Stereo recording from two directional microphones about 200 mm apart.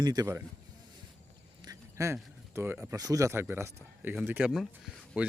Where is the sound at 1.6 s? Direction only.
15° right (ahead or behind).